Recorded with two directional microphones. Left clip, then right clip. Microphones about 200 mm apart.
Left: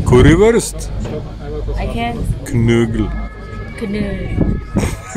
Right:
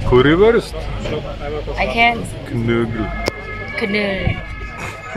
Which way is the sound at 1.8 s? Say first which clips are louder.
Right 8 dB; 5° left (ahead or behind).